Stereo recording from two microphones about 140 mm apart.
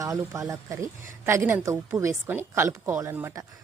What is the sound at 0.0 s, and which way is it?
A woman's voice, 20° right (ahead or behind).